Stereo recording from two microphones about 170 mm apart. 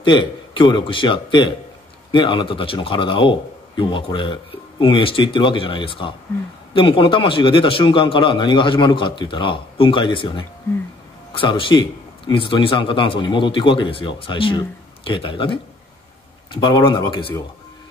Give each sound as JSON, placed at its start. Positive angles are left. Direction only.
{"t": 0.0, "sound": "a man's voice", "side_deg": 30}